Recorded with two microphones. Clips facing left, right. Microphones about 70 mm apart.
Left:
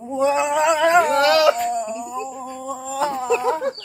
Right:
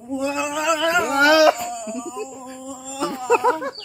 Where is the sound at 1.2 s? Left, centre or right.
Centre.